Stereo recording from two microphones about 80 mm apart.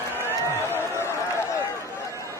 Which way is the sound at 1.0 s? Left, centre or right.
Left.